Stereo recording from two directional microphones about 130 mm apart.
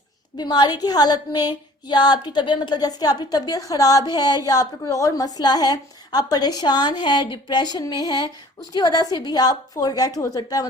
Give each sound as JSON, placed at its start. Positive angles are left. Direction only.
{"t": 0.3, "sound": "a woman's voice", "side_deg": 30}